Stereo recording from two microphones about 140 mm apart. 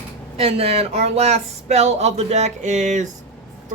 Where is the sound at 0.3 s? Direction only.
45° right (ahead or behind).